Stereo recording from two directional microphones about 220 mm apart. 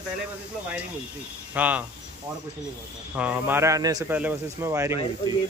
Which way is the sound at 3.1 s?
5° right (ahead or behind).